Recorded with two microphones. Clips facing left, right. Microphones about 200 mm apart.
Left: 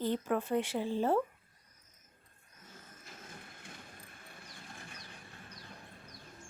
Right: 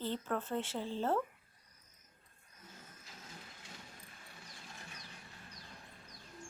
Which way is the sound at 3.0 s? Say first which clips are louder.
Left 4 dB; 55° left (ahead or behind).